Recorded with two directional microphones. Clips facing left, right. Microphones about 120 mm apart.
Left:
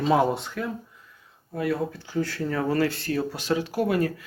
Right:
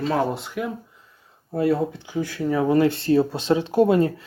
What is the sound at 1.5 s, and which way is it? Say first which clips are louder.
Speech: right 5 dB; 30° right (ahead or behind).